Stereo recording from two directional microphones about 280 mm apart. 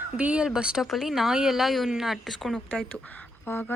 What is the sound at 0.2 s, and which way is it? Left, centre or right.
Speech, centre.